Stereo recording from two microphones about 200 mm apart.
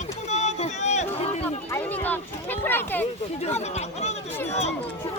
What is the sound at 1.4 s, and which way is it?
Children playing, 10° left (ahead or behind).